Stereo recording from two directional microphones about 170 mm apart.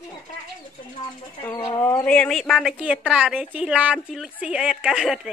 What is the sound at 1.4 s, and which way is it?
Speech, 15° left (ahead or behind).